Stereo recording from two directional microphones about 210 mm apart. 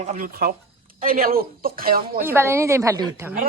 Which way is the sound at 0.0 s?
40° right (ahead or behind).